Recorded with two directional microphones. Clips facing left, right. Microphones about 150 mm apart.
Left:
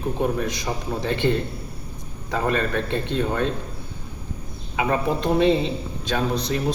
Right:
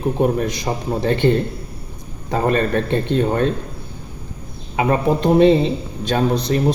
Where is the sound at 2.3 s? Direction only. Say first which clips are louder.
Right 5 dB; 40° right (ahead or behind).